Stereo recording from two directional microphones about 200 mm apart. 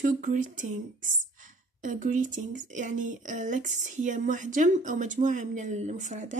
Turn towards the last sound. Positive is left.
turn(degrees=-35)  # may be behind; listen again after turning